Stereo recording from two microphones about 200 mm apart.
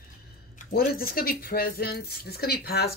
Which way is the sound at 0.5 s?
50° left (ahead or behind).